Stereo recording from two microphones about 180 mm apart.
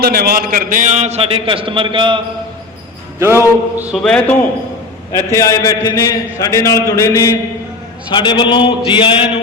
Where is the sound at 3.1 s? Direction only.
15° right (ahead or behind).